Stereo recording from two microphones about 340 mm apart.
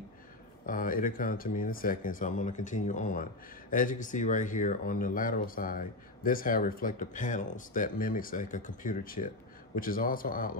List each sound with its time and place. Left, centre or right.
0.7 s speech: left